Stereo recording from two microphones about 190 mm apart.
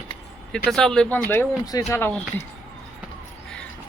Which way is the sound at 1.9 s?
5° left (ahead or behind).